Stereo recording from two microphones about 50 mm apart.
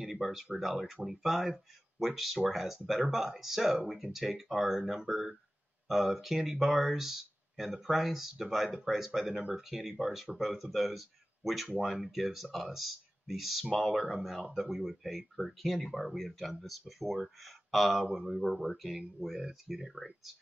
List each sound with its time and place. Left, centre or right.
0.0 s speech: centre